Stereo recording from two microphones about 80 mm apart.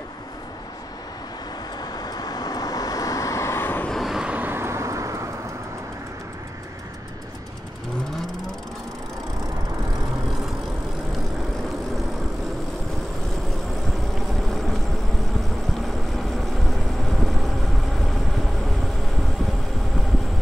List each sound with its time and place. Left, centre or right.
1.8 s vehicle: left
3.9 s vehicle: centre
4.3 s vehicle: right
14.1 s vehicle: centre
16.2 s vehicle: centre